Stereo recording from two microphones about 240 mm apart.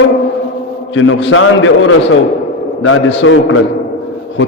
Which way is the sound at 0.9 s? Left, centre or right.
Left.